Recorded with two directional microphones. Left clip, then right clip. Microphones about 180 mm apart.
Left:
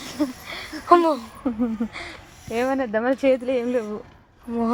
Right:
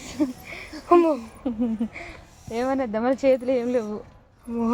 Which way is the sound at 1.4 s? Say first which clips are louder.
Left 2 dB; 35° left (ahead or behind).